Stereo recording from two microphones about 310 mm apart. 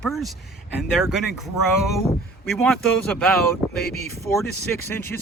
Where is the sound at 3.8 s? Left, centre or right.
Left.